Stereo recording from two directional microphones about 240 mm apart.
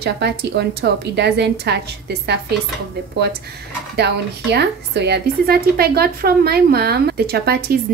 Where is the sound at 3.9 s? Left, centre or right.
Right.